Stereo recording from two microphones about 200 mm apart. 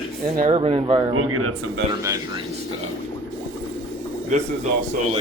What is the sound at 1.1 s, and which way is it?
Speech, 90° right.